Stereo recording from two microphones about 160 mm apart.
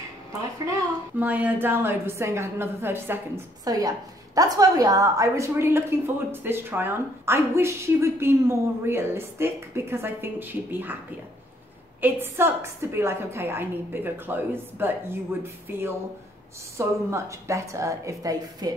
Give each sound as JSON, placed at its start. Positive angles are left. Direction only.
{"t": 1.2, "sound": "a woman's voice", "side_deg": -10}
{"t": 12.0, "sound": "a woman's voice", "side_deg": -15}